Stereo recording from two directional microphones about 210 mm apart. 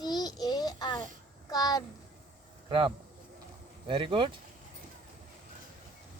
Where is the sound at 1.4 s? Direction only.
20° left (ahead or behind).